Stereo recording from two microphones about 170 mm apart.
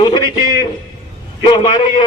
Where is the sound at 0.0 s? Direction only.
30° left (ahead or behind).